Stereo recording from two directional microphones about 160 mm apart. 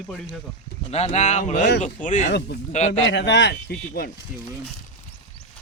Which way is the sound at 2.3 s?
90° left.